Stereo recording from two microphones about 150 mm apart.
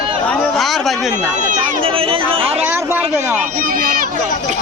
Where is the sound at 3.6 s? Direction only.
65° right (ahead or behind).